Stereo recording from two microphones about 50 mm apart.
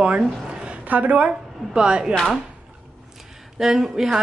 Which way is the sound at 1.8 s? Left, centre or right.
Centre.